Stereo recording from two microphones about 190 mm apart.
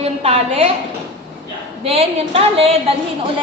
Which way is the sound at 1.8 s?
30° right (ahead or behind).